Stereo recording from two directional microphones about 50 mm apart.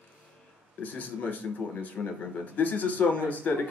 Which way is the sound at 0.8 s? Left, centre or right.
Left.